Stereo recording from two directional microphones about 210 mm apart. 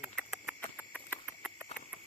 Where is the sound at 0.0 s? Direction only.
Centre (ahead or behind).